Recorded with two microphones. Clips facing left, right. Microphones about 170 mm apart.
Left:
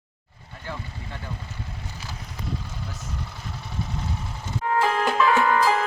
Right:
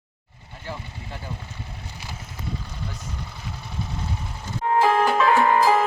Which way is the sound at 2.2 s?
Centre (ahead or behind).